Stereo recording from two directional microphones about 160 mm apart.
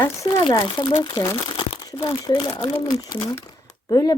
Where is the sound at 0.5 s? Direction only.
30° left (ahead or behind).